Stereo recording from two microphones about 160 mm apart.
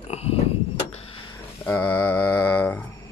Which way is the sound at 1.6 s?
10° left (ahead or behind).